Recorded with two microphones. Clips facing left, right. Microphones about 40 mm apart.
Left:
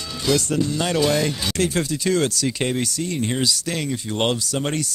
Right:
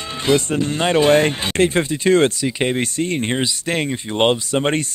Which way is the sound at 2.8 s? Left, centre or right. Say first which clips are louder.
Right 4 dB; right.